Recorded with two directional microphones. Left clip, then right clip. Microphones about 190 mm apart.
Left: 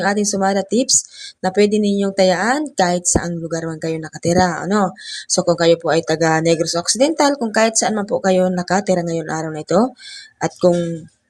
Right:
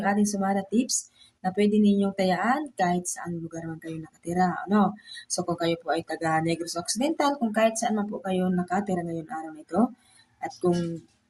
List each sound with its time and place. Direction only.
0.0 s speech: 35° left (ahead or behind)